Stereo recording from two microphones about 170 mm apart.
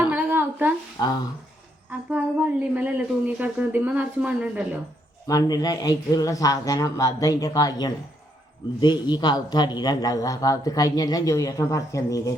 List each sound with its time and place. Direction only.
0.1 s a sound: 10° right (ahead or behind)
1.0 s a man's voice: 20° left (ahead or behind)
1.9 s speech: 10° right (ahead or behind)
5.3 s a man's voice: 20° left (ahead or behind)